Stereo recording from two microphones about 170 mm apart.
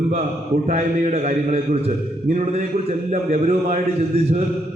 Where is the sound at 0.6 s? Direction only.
40° right (ahead or behind).